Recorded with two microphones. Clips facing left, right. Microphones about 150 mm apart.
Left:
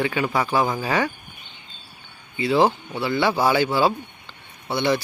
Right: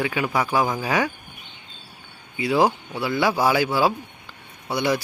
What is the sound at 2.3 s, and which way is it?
A man's voice, 10° right (ahead or behind).